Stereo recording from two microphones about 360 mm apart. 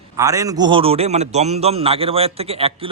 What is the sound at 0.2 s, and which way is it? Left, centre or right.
A man's voice, centre.